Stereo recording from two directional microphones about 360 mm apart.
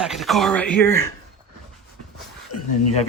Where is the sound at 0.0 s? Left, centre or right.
Centre.